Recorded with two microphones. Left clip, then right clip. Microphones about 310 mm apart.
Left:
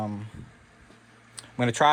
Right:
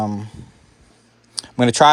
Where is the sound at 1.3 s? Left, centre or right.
Right.